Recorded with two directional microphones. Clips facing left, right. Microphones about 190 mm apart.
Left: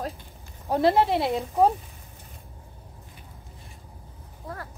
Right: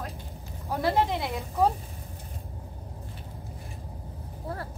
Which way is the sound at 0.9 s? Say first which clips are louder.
Left 5 dB; 20° left (ahead or behind).